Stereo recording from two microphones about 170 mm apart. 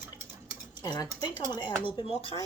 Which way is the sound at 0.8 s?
25° left (ahead or behind).